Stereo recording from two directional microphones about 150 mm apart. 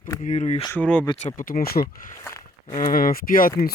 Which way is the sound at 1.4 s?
70° left (ahead or behind).